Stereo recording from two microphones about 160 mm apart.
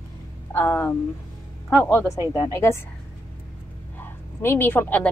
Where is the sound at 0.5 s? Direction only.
10° left (ahead or behind).